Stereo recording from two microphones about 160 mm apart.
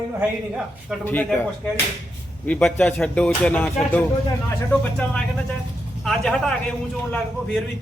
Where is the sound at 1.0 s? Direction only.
10° left (ahead or behind).